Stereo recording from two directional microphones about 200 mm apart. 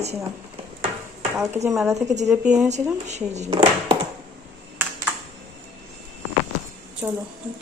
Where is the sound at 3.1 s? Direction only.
35° right (ahead or behind).